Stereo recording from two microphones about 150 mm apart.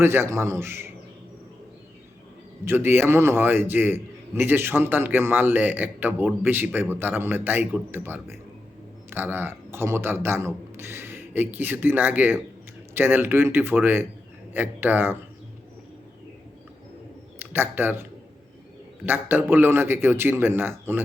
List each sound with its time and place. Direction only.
0.0 s a man's voice: 15° right (ahead or behind)
2.6 s a man's voice: 15° right (ahead or behind)
17.4 s a man's voice: 15° right (ahead or behind)
19.0 s a man's voice: 15° right (ahead or behind)